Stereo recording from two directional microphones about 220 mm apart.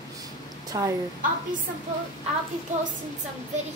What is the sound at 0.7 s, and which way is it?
Speech, 15° right (ahead or behind).